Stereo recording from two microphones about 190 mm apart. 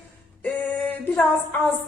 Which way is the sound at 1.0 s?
10° left (ahead or behind).